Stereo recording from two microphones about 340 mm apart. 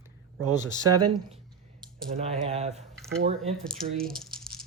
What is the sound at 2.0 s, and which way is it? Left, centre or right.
Speech, centre.